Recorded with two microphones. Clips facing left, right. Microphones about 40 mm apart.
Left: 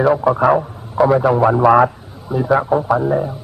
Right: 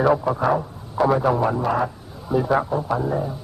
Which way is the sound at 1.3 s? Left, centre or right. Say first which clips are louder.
Left 7 dB; left.